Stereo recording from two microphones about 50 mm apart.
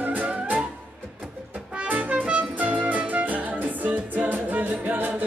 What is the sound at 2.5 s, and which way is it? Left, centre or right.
Music, right.